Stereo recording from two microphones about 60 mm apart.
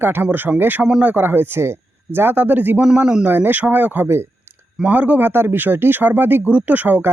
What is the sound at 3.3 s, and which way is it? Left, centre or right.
A man's voice, right.